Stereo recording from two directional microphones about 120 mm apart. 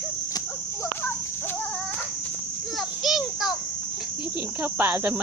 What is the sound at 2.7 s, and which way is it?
Child singing, centre (ahead or behind).